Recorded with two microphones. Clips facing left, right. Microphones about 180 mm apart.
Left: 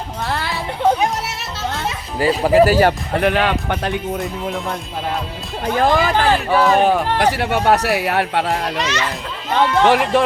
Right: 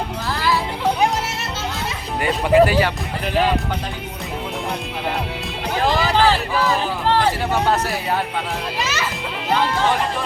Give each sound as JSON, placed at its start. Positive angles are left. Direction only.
{"t": 0.3, "sound": "music", "side_deg": 65}
{"t": 2.2, "sound": "speech", "side_deg": 40}
{"t": 3.2, "sound": "speech", "side_deg": 70}
{"t": 5.8, "sound": "speech", "side_deg": 50}
{"t": 8.8, "sound": "a child's voice", "side_deg": -5}
{"t": 9.7, "sound": "speech", "side_deg": 70}